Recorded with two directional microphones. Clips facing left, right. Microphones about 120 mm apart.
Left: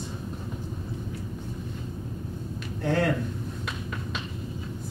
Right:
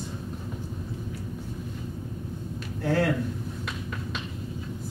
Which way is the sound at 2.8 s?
5° right (ahead or behind).